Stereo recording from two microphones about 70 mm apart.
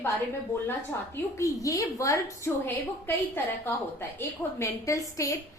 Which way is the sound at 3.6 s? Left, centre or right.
Left.